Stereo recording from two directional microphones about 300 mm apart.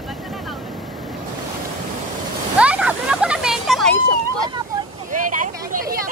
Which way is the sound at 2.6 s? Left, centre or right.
Centre.